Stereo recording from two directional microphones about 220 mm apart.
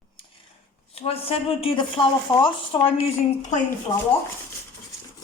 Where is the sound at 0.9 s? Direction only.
25° left (ahead or behind).